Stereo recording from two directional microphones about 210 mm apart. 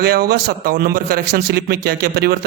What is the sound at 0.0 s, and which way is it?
A man's voice, 45° right (ahead or behind).